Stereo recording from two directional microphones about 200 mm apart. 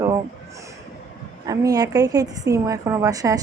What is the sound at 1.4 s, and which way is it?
Speech, 15° right (ahead or behind).